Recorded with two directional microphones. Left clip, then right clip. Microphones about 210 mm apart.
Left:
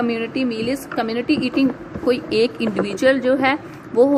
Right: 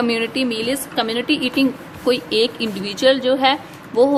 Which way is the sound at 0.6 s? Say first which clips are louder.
Right 2 dB; 15° right (ahead or behind).